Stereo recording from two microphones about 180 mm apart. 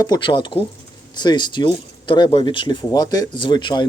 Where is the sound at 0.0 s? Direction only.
25° left (ahead or behind).